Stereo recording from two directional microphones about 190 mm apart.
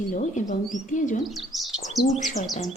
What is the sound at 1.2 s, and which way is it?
Bird, centre (ahead or behind).